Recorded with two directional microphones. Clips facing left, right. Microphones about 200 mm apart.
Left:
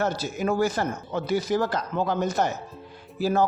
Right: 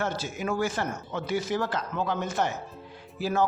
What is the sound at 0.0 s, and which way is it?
Speech, 40° left (ahead or behind).